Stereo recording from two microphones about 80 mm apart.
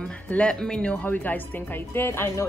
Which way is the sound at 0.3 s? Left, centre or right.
Centre.